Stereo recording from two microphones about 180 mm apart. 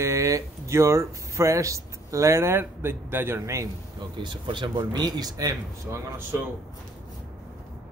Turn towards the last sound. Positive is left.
turn(degrees=-15)  # may be behind; listen again after turning